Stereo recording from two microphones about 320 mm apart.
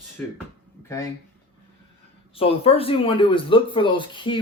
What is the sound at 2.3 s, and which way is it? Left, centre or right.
Speech, centre.